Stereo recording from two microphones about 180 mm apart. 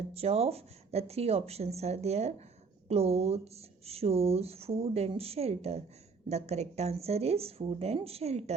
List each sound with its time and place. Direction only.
0.1 s speech: 35° right (ahead or behind)